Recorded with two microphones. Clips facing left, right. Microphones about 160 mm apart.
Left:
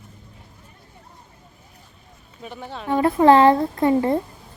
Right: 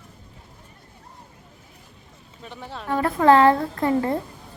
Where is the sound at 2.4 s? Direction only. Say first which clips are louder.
Left 3 dB; 5° left (ahead or behind).